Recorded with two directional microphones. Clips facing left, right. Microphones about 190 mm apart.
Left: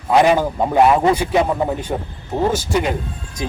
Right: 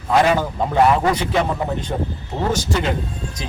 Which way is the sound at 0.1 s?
15° left (ahead or behind).